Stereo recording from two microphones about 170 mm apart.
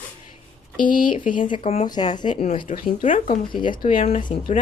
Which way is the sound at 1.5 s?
35° left (ahead or behind).